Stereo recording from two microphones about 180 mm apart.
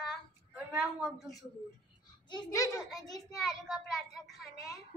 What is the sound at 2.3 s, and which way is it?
Speech, 20° left (ahead or behind).